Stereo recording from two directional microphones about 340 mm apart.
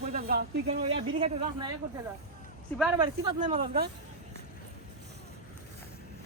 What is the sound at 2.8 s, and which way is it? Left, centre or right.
Speech, centre.